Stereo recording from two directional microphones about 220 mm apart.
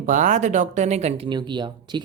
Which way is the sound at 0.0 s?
35° right (ahead or behind).